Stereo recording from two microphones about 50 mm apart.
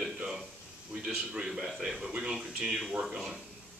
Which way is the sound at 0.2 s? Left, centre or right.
Centre.